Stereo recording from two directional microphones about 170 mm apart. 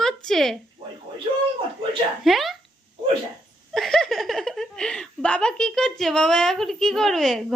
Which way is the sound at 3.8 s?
5° left (ahead or behind).